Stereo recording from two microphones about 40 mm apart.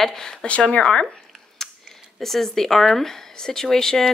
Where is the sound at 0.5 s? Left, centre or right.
Left.